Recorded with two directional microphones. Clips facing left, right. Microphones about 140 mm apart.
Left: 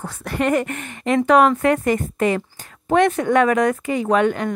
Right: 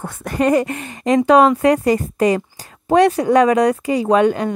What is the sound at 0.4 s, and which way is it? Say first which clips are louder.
Speech: right 4 dB; 35° right (ahead or behind).